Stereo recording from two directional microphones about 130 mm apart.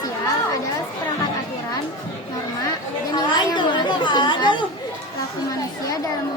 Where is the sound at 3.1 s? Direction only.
35° left (ahead or behind).